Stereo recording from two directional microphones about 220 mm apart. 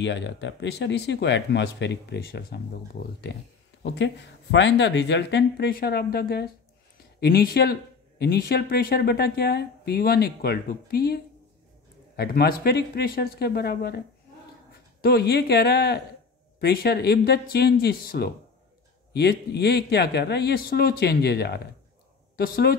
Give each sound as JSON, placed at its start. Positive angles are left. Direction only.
{"t": 0.0, "sound": "speech", "side_deg": 55}
{"t": 12.2, "sound": "speech", "side_deg": 45}